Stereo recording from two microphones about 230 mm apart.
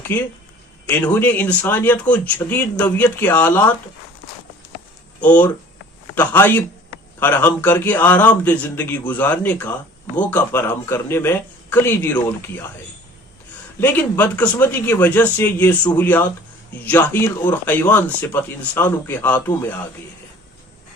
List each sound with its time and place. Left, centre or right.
0.1 s speech: centre
5.2 s speech: centre
13.7 s speech: centre